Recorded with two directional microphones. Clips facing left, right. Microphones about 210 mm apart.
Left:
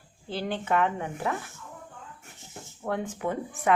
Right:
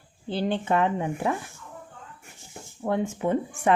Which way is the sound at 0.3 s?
30° right (ahead or behind).